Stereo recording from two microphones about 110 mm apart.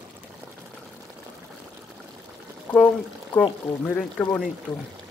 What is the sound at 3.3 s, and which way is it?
Speech, 10° left (ahead or behind).